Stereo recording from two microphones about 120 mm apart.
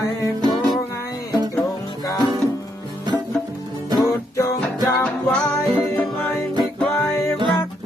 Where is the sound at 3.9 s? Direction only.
30° left (ahead or behind).